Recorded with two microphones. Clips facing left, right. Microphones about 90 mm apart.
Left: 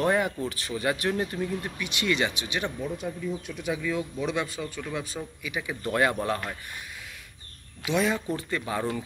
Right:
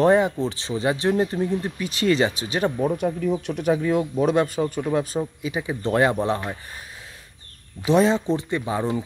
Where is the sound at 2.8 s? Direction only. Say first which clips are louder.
Right 9 dB; 55° right (ahead or behind).